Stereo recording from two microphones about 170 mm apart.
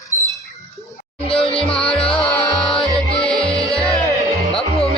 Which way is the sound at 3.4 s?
35° left (ahead or behind).